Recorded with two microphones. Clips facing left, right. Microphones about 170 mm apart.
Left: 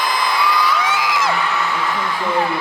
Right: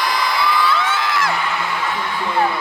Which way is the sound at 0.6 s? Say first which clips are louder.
Even; 15° left (ahead or behind).